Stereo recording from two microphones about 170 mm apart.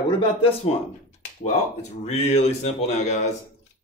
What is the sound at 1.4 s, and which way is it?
Speech, 40° left (ahead or behind).